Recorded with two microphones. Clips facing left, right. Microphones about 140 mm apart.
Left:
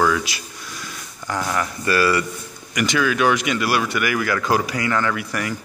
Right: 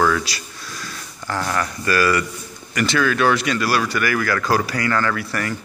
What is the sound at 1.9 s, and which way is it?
Speech, 25° left (ahead or behind).